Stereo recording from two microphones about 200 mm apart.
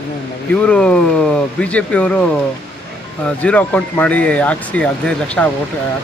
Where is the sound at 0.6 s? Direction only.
5° left (ahead or behind).